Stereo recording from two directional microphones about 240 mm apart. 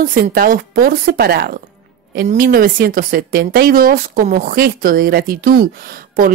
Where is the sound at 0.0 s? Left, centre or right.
Right.